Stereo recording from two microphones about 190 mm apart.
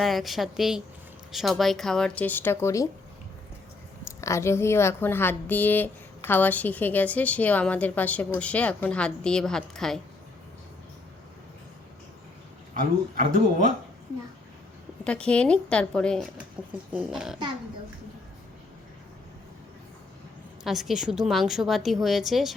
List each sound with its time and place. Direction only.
0.0 s speech: centre (ahead or behind)
4.2 s a woman's voice: 15° left (ahead or behind)
13.1 s speech: 40° right (ahead or behind)
15.0 s speech: 5° left (ahead or behind)
20.7 s speech: centre (ahead or behind)